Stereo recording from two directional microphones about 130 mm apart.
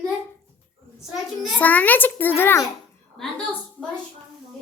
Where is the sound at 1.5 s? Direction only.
10° left (ahead or behind).